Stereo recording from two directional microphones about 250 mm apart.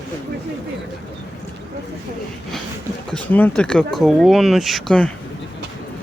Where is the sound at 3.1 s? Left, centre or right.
Centre.